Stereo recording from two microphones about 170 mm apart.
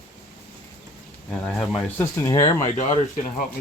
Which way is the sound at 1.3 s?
5° left (ahead or behind).